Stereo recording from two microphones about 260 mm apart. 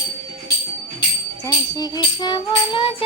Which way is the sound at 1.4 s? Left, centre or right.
Centre.